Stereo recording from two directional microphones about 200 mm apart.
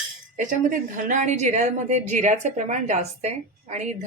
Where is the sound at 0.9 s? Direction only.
40° right (ahead or behind).